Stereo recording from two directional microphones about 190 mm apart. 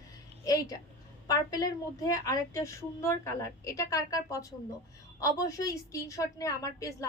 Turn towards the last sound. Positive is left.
turn(degrees=15)  # may be behind; listen again after turning